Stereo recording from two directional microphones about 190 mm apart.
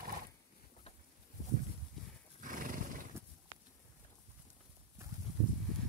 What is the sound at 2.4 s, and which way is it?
Horse, 45° right (ahead or behind).